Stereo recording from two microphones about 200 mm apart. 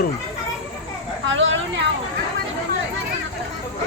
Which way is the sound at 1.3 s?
70° right (ahead or behind).